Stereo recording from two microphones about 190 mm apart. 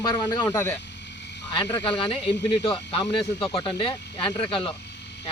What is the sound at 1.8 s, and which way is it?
Speech, 25° left (ahead or behind).